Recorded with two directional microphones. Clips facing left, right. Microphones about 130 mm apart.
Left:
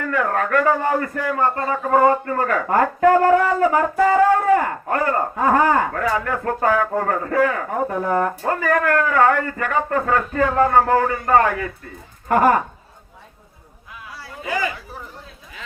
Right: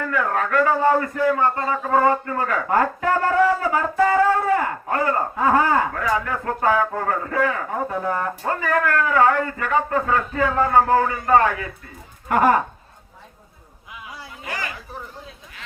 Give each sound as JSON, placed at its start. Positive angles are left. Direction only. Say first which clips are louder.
{"t": 0.1, "sound": "speech", "louder": "left 3 dB", "side_deg": 45}